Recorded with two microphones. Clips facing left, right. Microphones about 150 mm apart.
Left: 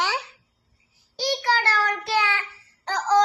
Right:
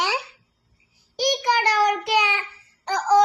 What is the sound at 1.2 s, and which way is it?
Child singing, 15° right (ahead or behind).